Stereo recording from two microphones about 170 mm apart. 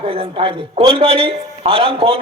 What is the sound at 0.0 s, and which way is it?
A man's voice, 30° right (ahead or behind).